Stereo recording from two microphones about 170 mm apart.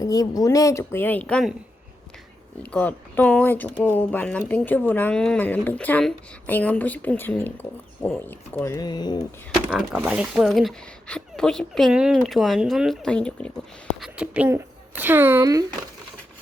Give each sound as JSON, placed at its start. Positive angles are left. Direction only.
{"t": 0.0, "sound": "speech", "side_deg": 20}
{"t": 2.7, "sound": "speech", "side_deg": 10}
{"t": 9.6, "sound": "speech", "side_deg": -5}
{"t": 14.0, "sound": "speech", "side_deg": -5}